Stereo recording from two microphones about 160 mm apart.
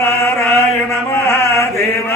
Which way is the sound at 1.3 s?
15° left (ahead or behind).